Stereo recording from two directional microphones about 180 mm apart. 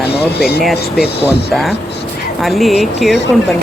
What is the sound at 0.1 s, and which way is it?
Speech, 65° left (ahead or behind).